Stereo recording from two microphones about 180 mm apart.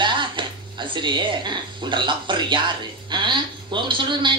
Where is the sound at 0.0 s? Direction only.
25° right (ahead or behind).